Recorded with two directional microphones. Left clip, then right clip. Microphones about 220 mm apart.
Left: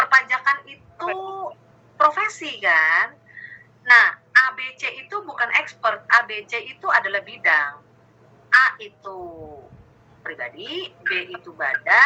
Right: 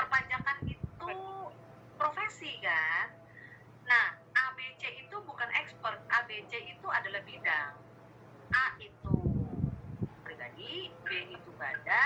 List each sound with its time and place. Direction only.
0.0 s a sound: 40° left (ahead or behind)
8.4 s a woman's voice: 40° left (ahead or behind)
10.2 s speech: 45° left (ahead or behind)